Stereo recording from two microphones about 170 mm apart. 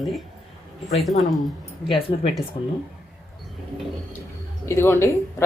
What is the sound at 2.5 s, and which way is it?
Speech, 30° left (ahead or behind).